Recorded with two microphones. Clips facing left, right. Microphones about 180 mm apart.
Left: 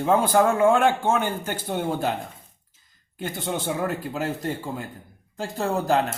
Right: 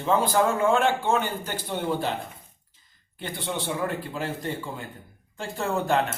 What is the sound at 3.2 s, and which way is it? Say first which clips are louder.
Speech: left 3 dB; 45° left (ahead or behind).